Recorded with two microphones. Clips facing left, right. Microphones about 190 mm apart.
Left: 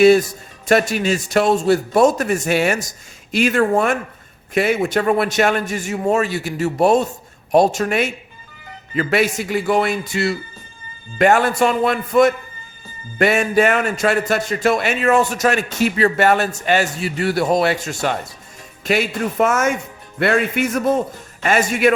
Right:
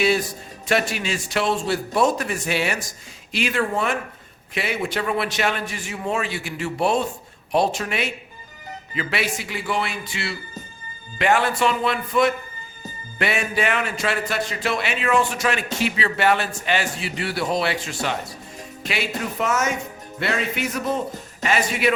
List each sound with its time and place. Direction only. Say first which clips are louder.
0.0 s a man's voice: left 9 dB; 45° left (ahead or behind)